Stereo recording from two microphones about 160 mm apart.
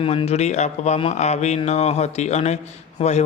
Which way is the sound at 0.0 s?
35° left (ahead or behind).